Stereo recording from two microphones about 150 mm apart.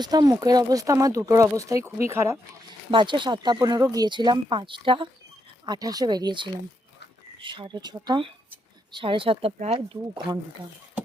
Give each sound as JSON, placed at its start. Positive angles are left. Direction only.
{"t": 0.0, "sound": "speech", "side_deg": -25}
{"t": 2.9, "sound": "speech", "side_deg": -30}